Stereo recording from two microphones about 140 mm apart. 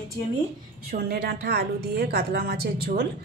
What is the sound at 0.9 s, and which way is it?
A woman's voice, 90° right.